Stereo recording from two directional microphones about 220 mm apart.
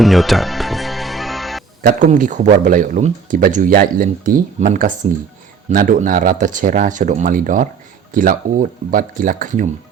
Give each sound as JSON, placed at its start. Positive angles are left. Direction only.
{"t": 0.0, "sound": "music", "side_deg": 0}
{"t": 1.8, "sound": "speech", "side_deg": -35}